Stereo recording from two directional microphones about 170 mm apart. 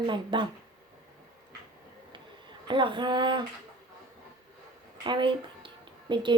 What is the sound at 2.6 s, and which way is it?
Speech, 30° right (ahead or behind).